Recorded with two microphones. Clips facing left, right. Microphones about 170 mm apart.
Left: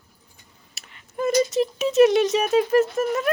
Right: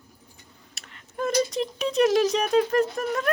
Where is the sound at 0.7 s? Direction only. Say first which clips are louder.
Left 2 dB; 5° left (ahead or behind).